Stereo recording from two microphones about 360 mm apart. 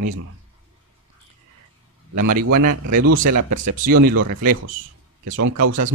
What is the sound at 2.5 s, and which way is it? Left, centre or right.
A man's voice, right.